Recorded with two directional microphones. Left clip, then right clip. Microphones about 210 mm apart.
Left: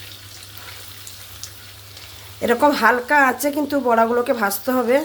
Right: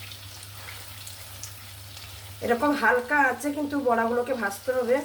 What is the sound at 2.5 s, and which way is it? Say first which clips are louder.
A woman's voice: left 7 dB; 50° left (ahead or behind).